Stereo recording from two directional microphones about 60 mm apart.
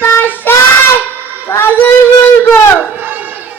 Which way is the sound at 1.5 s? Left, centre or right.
Left.